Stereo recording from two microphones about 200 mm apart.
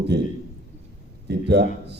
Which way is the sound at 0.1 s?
55° right (ahead or behind).